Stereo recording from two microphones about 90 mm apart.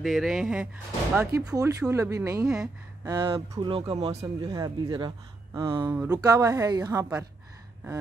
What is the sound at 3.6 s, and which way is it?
Speech, 75° right (ahead or behind).